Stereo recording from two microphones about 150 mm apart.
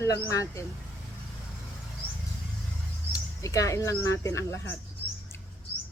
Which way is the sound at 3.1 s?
20° left (ahead or behind).